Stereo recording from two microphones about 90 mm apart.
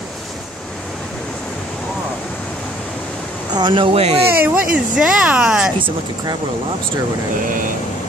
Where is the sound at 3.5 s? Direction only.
60° right (ahead or behind); by 4.2 s 80° right.